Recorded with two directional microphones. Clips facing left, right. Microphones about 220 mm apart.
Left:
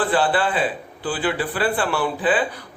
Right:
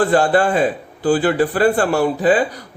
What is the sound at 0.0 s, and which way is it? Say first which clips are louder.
A man's voice: right 6 dB; 45° right (ahead or behind).